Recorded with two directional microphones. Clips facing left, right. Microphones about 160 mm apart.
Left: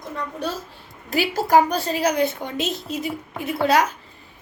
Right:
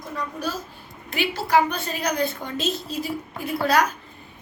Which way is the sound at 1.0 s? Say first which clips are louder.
Left 4 dB; 40° left (ahead or behind).